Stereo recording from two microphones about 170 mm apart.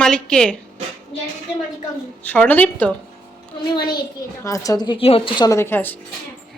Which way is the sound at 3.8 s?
25° left (ahead or behind).